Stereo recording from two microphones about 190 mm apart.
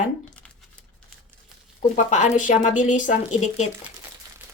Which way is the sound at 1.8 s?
40° left (ahead or behind).